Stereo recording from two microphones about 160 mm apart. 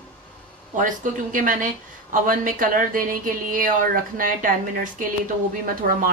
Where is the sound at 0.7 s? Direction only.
55° right (ahead or behind).